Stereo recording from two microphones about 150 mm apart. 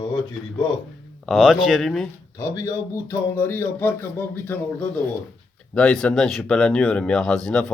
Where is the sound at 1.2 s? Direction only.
Centre (ahead or behind).